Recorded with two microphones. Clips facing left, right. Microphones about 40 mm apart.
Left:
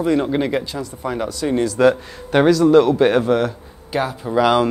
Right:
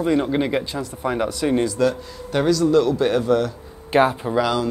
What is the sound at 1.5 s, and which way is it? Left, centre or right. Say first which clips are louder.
Speech: left 2 dB; centre.